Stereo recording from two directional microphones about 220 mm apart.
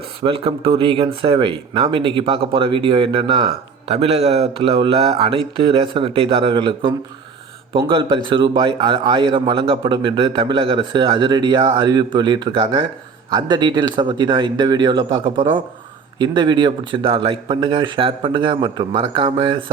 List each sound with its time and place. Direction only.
0.2 s speech: 25° right (ahead or behind)